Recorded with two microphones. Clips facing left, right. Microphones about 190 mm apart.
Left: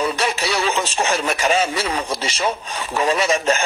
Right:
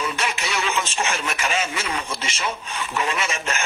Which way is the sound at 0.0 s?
35° left (ahead or behind).